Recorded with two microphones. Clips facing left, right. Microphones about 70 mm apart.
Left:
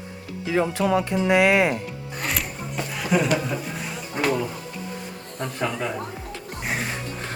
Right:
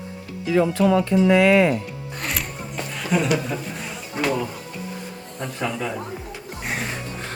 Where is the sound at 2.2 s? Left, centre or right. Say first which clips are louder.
Left 1 dB; centre.